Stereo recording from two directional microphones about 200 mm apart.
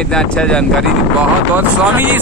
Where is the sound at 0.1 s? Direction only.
5° left (ahead or behind).